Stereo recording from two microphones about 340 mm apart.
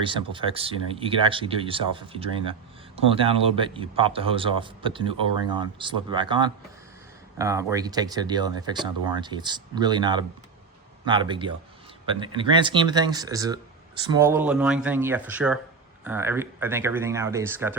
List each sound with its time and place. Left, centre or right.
0.0 s speech: centre